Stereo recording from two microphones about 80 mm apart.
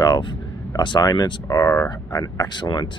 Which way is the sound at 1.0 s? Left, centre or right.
Left.